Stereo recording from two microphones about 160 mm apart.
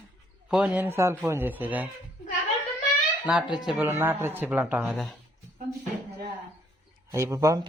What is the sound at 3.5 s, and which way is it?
Speech, 5° right (ahead or behind).